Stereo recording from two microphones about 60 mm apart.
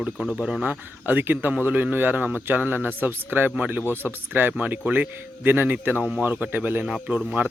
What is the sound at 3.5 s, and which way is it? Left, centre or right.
Speech, right.